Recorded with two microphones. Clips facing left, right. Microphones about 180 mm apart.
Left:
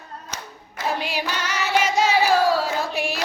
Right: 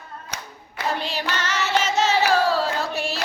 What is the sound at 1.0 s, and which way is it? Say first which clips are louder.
Singing: even; 10° left (ahead or behind).